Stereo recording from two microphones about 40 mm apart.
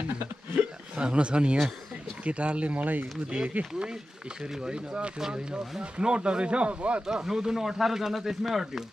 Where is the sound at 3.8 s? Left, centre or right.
Centre; by 7.0 s right.